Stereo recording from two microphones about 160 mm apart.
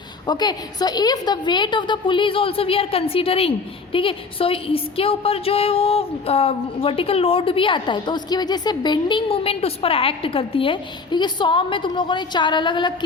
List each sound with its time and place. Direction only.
0.3 s a woman's voice: 25° left (ahead or behind)